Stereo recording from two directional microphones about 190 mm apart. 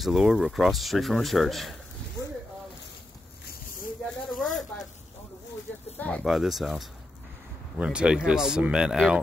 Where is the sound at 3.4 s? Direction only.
45° left (ahead or behind).